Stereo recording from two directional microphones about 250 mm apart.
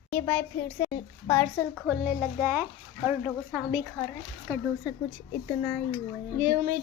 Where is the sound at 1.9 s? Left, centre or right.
Centre.